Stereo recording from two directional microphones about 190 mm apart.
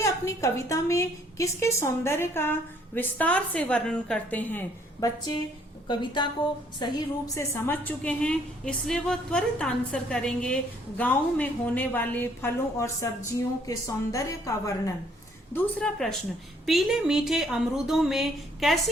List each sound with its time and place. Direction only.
0.0 s a woman's voice: 15° left (ahead or behind)
7.3 s a woman's voice: 10° left (ahead or behind)